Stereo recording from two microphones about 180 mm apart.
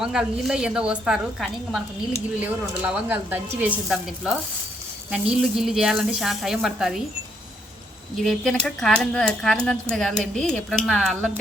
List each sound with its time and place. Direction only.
0.0 s a woman's voice: 5° right (ahead or behind)
8.2 s a woman's voice: centre (ahead or behind)